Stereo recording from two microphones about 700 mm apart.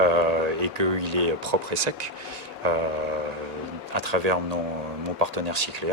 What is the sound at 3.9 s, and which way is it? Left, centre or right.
Speech, right.